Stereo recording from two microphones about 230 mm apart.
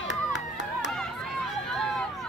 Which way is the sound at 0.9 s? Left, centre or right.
Centre.